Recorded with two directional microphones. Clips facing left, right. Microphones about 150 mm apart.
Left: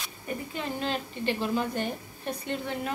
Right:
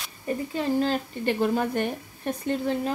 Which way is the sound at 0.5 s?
40° right (ahead or behind).